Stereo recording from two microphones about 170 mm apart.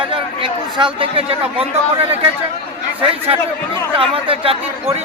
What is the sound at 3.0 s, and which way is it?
Speech, 35° right (ahead or behind).